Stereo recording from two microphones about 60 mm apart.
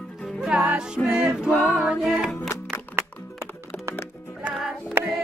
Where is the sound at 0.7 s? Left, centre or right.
Centre.